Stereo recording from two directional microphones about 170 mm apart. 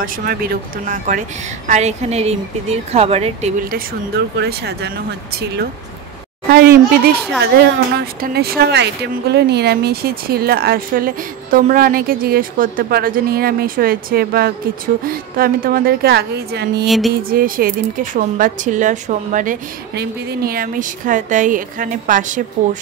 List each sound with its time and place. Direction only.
0.0 s a woman's voice: 55° right (ahead or behind); by 3.5 s 35° right (ahead or behind)
4.4 s speech: 75° right (ahead or behind)
6.5 s speech: 65° right (ahead or behind)
16.8 s music: centre (ahead or behind)
17.1 s speech: 60° right (ahead or behind)